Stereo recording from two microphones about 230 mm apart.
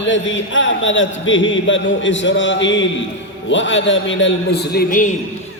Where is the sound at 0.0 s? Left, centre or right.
Left.